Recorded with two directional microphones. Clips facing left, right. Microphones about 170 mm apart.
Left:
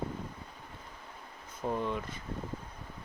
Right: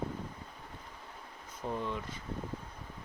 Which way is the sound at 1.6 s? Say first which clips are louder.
Left 4 dB; 55° left (ahead or behind).